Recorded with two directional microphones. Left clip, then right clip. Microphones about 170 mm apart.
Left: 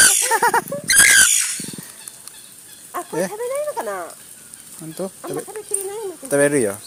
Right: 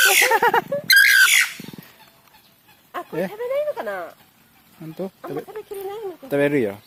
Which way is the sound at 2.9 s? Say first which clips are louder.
Left 3 dB; 25° right (ahead or behind).